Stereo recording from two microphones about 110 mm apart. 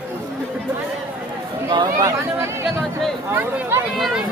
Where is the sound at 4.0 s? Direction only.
Centre (ahead or behind).